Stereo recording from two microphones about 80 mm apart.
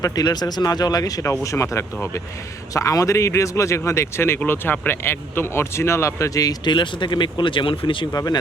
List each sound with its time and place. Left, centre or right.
0.0 s speech: left
1.2 s speech: left
6.7 s speech: left
8.1 s speech: left